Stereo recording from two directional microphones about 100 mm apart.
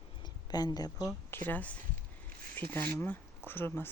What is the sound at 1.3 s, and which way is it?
Speech, 15° left (ahead or behind).